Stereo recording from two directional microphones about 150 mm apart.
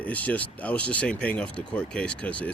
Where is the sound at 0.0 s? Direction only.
10° left (ahead or behind).